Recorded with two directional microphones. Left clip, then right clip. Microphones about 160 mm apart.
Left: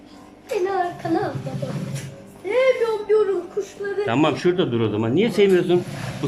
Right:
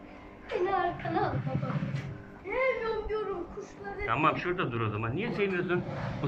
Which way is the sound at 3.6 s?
70° left (ahead or behind).